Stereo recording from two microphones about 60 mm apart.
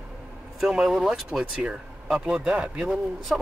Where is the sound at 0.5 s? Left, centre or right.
Centre.